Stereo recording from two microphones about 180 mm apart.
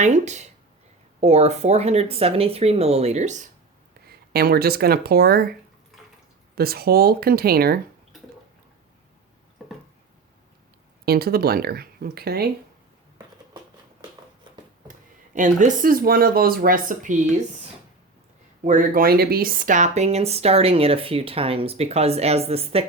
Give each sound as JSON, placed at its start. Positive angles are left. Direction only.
{"t": 0.0, "sound": "speech", "side_deg": -40}
{"t": 4.0, "sound": "speech", "side_deg": -60}
{"t": 6.6, "sound": "speech", "side_deg": -60}
{"t": 11.0, "sound": "speech", "side_deg": -60}
{"t": 14.5, "sound": "a sound", "side_deg": -25}
{"t": 14.8, "sound": "speech", "side_deg": -45}
{"t": 18.6, "sound": "speech", "side_deg": -45}